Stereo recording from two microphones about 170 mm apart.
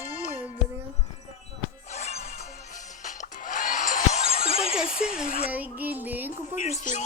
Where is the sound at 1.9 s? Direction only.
40° left (ahead or behind).